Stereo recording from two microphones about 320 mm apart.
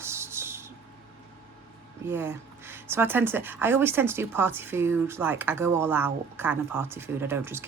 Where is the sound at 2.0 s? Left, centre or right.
Centre.